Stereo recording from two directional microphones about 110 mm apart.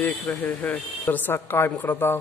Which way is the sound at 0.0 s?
10° left (ahead or behind).